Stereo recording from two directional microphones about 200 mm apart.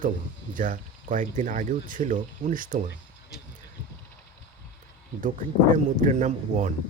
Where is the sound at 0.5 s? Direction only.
40° right (ahead or behind).